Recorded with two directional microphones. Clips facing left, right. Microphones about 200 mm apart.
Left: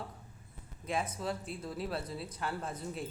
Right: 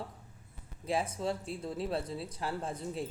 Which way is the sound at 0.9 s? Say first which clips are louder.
Right 3 dB; 30° right (ahead or behind).